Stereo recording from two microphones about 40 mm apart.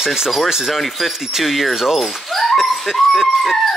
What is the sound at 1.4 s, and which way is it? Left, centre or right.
Speech, centre.